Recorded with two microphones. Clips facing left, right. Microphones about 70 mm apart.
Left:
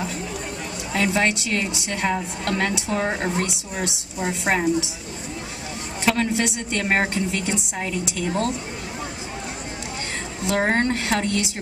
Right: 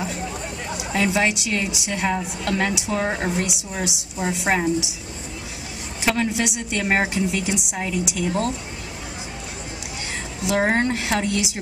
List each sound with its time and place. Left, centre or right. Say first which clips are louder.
0.7 s a woman's voice: right 1 dB; centre
6.0 s a woman's voice: left 1 dB; centre
10.4 s a woman's voice: right 1 dB; centre